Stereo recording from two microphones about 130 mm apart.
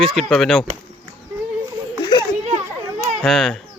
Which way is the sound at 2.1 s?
35° left (ahead or behind).